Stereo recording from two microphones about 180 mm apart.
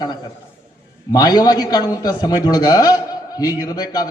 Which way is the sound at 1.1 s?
20° left (ahead or behind).